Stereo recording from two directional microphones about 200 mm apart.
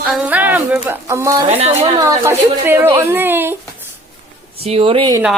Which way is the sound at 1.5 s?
30° right (ahead or behind).